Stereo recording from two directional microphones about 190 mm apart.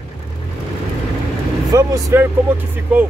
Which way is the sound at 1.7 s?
15° right (ahead or behind).